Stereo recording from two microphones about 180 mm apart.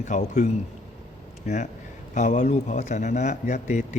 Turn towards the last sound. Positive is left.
turn(degrees=40)  # may be behind; listen again after turning